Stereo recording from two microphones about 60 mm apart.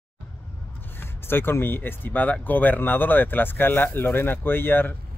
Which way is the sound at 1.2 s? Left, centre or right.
Left.